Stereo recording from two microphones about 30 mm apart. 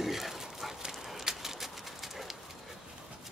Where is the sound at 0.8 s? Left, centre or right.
Centre.